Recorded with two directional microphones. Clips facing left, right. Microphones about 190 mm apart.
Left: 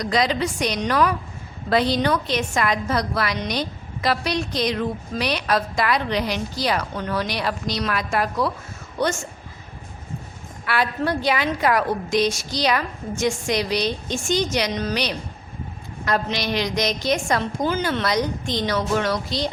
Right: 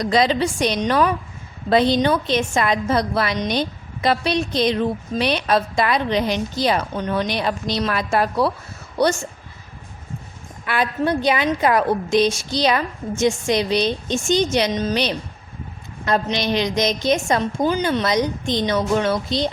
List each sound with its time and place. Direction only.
0.0 s a woman's voice: 30° right (ahead or behind)
10.7 s a woman's voice: 20° right (ahead or behind)